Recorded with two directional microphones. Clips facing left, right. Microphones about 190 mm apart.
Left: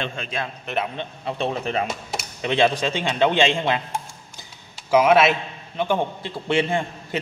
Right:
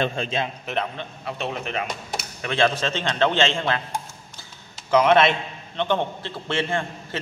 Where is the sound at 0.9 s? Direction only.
30° left (ahead or behind).